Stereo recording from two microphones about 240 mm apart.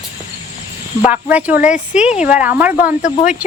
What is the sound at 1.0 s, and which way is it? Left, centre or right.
A woman's voice, centre.